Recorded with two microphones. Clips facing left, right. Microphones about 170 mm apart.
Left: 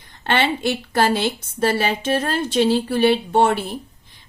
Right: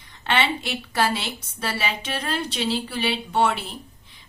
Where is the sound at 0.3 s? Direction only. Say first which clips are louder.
Left 4 dB; 50° left (ahead or behind).